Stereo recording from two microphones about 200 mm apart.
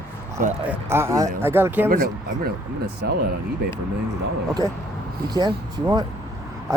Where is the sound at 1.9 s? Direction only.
50° right (ahead or behind).